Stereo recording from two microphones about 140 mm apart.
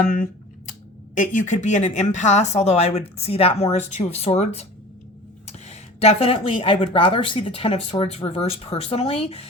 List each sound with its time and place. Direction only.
0.0 s speech: 80° left
1.1 s speech: 65° left (ahead or behind); by 9.5 s 45° left (ahead or behind)